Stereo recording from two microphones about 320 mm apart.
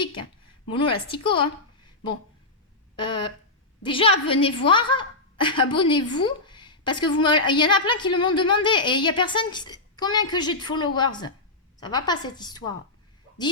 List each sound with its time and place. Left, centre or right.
0.7 s a woman's voice: centre
2.9 s a woman's voice: centre